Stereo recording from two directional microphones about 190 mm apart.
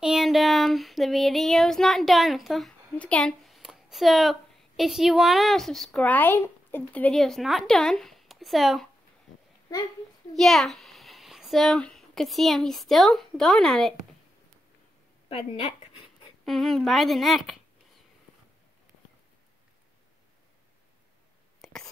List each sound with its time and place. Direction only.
0.0 s child singing: centre (ahead or behind)
9.7 s a child's voice: 20° left (ahead or behind)
10.3 s a child's voice: centre (ahead or behind)
16.4 s a woman's voice: centre (ahead or behind)
21.6 s whispering: centre (ahead or behind)